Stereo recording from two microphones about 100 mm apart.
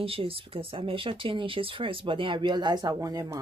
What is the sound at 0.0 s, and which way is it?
Speech, 65° right (ahead or behind).